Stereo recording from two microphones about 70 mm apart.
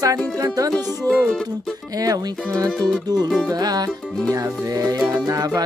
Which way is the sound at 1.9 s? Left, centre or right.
Right.